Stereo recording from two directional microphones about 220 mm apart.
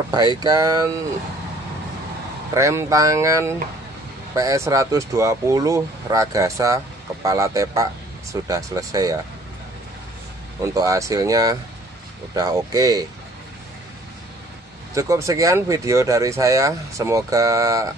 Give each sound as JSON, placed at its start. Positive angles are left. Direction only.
{"t": 0.1, "sound": "speech", "side_deg": -20}
{"t": 2.5, "sound": "speech", "side_deg": -15}
{"t": 10.6, "sound": "speech", "side_deg": -15}
{"t": 15.0, "sound": "speech", "side_deg": -15}